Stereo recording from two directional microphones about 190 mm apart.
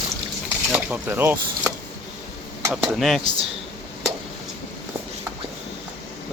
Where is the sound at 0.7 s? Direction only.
10° right (ahead or behind).